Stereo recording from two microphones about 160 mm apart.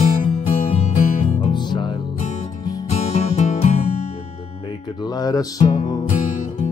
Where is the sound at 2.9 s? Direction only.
45° left (ahead or behind).